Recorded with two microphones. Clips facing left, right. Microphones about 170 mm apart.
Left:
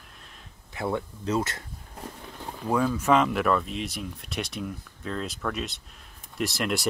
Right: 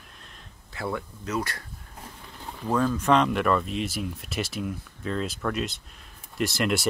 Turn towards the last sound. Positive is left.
turn(degrees=0)  # may be behind; listen again after turning